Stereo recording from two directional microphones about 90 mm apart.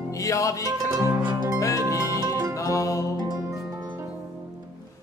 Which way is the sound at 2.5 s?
40° left (ahead or behind).